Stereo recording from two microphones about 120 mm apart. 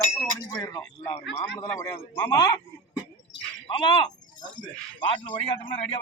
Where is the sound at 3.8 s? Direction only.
40° left (ahead or behind).